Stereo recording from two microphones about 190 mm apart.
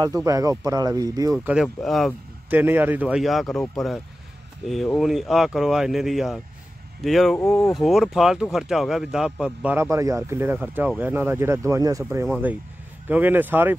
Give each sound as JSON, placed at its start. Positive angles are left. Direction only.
{"t": 0.0, "sound": "speech", "side_deg": -15}
{"t": 1.4, "sound": "speech", "side_deg": -5}
{"t": 2.5, "sound": "speech", "side_deg": -10}
{"t": 7.7, "sound": "speech", "side_deg": 0}